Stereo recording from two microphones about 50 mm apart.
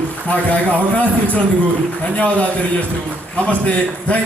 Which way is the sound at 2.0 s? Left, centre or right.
Left.